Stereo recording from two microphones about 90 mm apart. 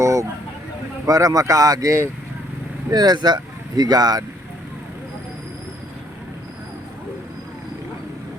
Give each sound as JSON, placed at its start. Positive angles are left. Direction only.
{"t": 0.0, "sound": "vehicle", "side_deg": -35}
{"t": 1.0, "sound": "speech", "side_deg": -40}
{"t": 2.9, "sound": "speech", "side_deg": -50}